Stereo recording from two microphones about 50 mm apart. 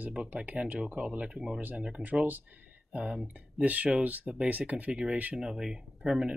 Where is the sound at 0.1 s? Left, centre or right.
Right.